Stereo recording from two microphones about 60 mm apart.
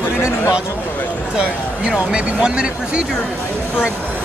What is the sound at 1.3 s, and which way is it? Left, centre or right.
Speech, centre.